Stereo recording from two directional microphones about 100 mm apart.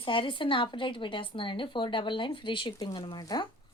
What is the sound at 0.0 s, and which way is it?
Speech, 55° left (ahead or behind).